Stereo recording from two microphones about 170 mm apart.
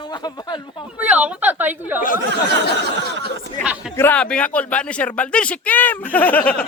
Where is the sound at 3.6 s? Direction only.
5° right (ahead or behind).